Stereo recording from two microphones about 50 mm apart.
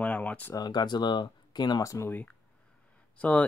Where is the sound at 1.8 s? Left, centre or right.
Left.